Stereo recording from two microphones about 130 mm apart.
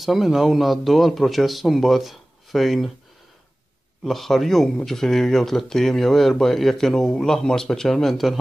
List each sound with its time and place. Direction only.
0.0 s speech: centre (ahead or behind)
4.0 s speech: centre (ahead or behind)